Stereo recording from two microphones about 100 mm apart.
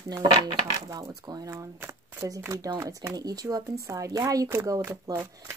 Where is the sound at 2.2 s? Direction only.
35° right (ahead or behind).